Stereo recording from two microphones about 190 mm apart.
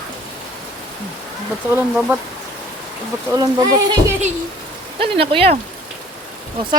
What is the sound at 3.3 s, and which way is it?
Speech, 20° right (ahead or behind).